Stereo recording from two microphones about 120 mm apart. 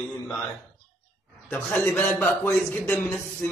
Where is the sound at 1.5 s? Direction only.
10° left (ahead or behind).